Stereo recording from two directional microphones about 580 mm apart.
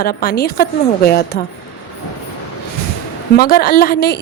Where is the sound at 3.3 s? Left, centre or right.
Centre.